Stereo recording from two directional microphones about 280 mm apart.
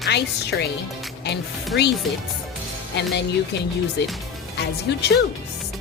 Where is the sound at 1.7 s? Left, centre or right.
Left.